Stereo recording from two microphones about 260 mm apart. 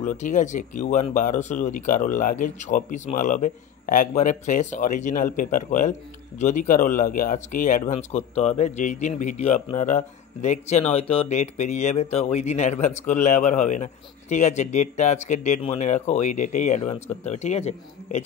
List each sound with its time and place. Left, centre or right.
0.0 s speech: left